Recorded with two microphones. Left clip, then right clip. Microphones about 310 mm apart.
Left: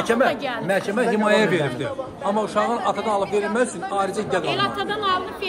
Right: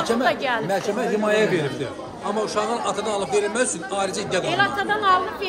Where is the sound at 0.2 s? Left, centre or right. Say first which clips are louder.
Even; right.